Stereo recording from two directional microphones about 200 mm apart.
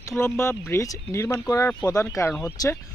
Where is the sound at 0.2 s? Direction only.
15° left (ahead or behind).